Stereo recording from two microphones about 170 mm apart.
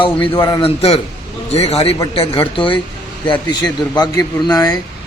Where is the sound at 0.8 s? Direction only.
35° left (ahead or behind).